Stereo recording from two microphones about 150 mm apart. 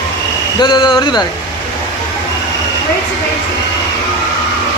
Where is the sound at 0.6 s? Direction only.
30° left (ahead or behind).